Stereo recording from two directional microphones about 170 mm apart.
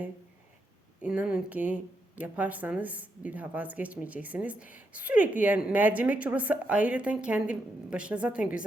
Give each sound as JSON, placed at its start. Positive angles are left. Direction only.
{"t": 1.0, "sound": "speech", "side_deg": -10}